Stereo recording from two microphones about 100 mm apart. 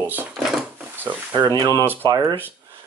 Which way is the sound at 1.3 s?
45° right (ahead or behind).